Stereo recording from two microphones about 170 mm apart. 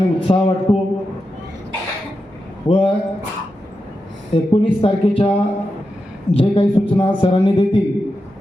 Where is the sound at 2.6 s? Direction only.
30° left (ahead or behind).